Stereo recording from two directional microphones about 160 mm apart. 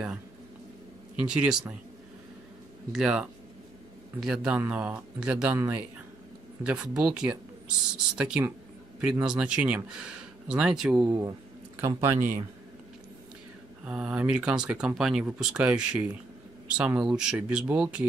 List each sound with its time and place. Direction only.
1.1 s speech: 5° right (ahead or behind)
2.9 s speech: 5° right (ahead or behind)
11.1 s speech: 20° right (ahead or behind)
13.8 s speech: 5° right (ahead or behind)